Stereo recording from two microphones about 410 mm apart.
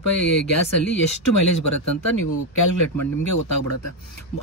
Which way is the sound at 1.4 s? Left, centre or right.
Left.